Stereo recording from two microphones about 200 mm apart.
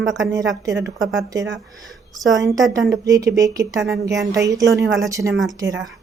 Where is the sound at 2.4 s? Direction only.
15° right (ahead or behind).